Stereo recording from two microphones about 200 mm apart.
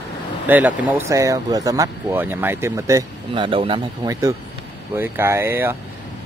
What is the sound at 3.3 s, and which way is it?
Speech, 25° right (ahead or behind).